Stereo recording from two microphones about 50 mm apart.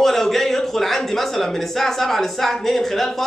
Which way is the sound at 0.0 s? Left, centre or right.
Centre.